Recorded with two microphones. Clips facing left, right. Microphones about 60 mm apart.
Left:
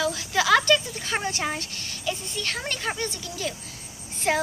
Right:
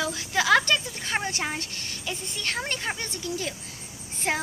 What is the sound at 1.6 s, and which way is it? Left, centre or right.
A woman's voice, right.